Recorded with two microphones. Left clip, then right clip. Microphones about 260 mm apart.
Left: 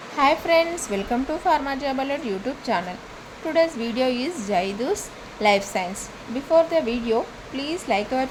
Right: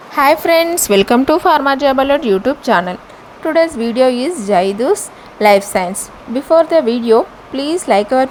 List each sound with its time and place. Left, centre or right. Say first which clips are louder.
0.2 s speech: right 8 dB; right